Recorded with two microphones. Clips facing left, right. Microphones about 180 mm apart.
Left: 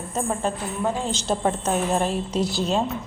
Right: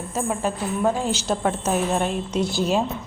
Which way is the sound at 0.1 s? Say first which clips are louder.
Even; 5° right (ahead or behind).